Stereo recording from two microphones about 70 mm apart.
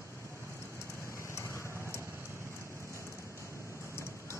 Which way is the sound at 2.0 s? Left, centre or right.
Right.